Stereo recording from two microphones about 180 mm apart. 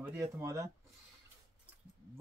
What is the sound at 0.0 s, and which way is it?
Speech, 15° right (ahead or behind).